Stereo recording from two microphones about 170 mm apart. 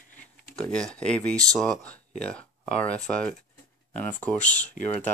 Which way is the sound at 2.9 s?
5° left (ahead or behind).